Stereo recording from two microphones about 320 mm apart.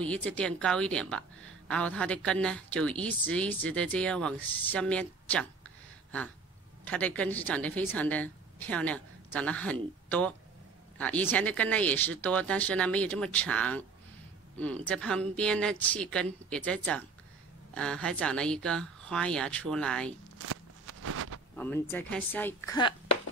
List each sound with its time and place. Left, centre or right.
0.0 s a woman's voice: centre
6.8 s a woman's voice: centre
20.3 s walk: right
21.5 s a woman's voice: centre